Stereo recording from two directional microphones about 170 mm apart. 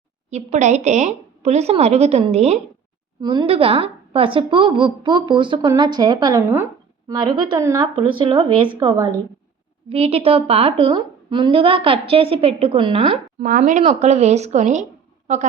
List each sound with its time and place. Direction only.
0.3 s a woman's voice: 40° right (ahead or behind)
3.2 s a woman's voice: 25° right (ahead or behind)
13.4 s speech: 50° right (ahead or behind)